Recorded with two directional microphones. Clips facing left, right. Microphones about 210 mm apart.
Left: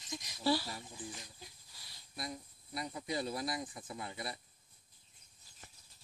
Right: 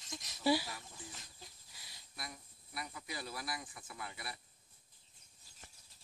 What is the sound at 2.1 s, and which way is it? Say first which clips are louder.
Speech: left 7 dB; 25° left (ahead or behind).